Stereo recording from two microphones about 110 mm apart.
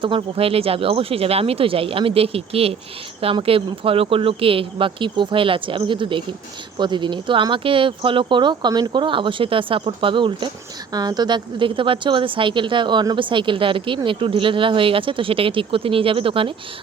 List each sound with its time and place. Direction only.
0.0 s speech: 55° right (ahead or behind)